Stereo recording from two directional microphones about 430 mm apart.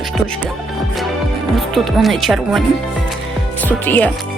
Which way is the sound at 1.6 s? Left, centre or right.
Centre.